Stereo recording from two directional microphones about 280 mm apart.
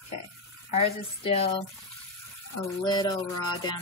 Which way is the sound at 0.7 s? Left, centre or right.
Left.